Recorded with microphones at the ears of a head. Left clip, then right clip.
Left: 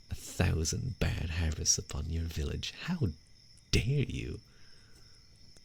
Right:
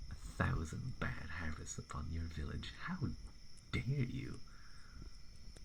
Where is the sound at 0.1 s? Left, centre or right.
Left.